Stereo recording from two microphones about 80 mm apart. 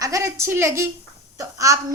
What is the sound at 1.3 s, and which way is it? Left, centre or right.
Speech, right.